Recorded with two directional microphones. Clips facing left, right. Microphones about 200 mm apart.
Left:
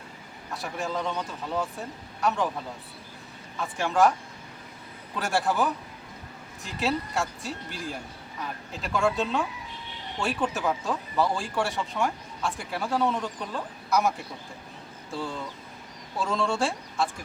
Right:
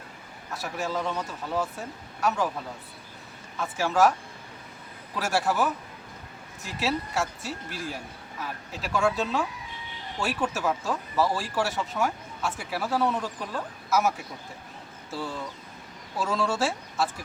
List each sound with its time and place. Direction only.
0.5 s speech: centre (ahead or behind)
3.6 s speech: centre (ahead or behind)
5.1 s speech: centre (ahead or behind)